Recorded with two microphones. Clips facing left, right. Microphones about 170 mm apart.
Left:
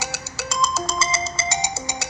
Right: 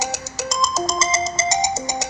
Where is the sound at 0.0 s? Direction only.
40° right (ahead or behind).